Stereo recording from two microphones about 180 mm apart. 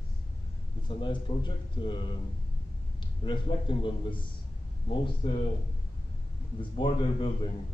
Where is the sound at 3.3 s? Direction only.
25° left (ahead or behind).